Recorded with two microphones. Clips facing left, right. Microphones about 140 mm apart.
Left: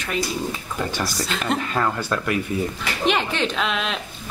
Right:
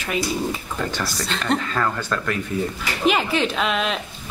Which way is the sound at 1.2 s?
5° left (ahead or behind).